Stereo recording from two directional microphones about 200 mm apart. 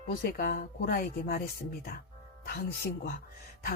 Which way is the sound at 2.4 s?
50° left (ahead or behind).